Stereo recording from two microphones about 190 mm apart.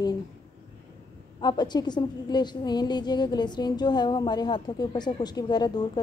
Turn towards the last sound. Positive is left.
turn(degrees=20)  # may be behind; listen again after turning